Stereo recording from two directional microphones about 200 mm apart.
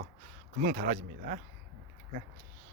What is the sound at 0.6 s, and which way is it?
Speech, 40° right (ahead or behind).